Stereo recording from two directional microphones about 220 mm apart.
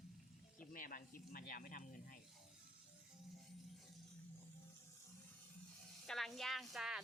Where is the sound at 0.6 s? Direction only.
40° left (ahead or behind).